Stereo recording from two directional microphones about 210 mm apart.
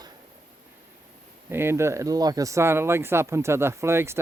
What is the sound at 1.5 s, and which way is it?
Speech, 10° right (ahead or behind).